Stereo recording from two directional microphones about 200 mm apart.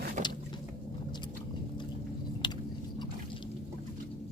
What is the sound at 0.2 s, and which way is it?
Vehicle, 35° right (ahead or behind).